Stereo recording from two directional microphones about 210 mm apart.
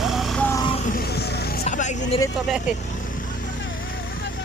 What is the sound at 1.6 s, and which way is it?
Hubbub, 35° left (ahead or behind).